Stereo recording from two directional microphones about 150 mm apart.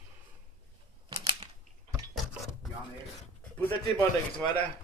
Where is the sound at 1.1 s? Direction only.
25° right (ahead or behind).